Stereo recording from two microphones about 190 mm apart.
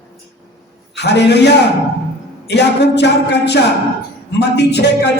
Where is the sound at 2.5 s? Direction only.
60° left (ahead or behind).